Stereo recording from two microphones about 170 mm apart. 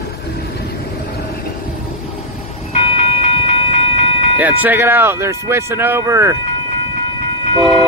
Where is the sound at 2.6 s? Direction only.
35° left (ahead or behind).